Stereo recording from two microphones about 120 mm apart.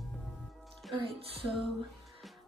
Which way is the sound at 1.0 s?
50° right (ahead or behind).